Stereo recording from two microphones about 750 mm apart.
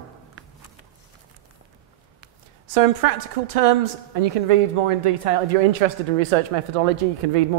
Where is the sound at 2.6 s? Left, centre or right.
Right.